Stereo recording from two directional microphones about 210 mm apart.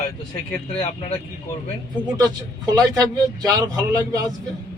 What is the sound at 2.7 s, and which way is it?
Speech, 20° right (ahead or behind).